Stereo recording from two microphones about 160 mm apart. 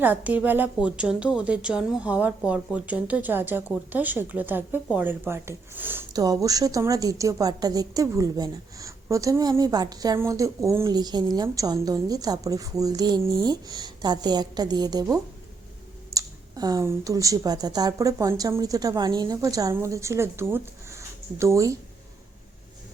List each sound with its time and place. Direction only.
0.0 s a woman's voice: 10° right (ahead or behind)
16.1 s a woman's voice: 20° right (ahead or behind)